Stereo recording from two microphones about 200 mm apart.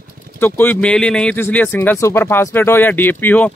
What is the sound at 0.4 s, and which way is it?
Speech, 10° left (ahead or behind).